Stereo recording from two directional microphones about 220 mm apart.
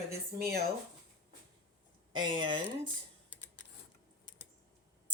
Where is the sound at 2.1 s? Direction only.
20° right (ahead or behind).